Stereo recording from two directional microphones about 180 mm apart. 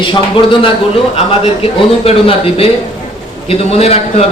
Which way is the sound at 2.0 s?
30° left (ahead or behind).